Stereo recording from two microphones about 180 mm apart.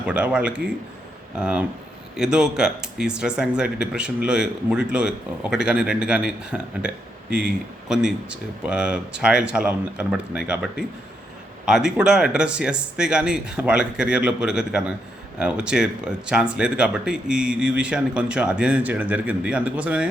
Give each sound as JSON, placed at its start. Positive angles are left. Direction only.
{"t": 0.0, "sound": "a man's voice", "side_deg": -5}